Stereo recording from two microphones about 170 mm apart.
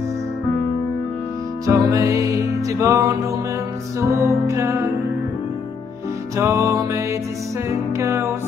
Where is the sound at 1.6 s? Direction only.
20° right (ahead or behind).